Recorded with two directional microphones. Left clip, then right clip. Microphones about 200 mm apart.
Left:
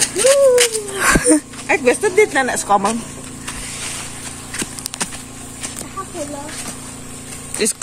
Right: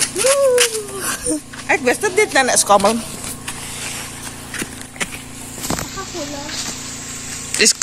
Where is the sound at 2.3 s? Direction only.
30° right (ahead or behind).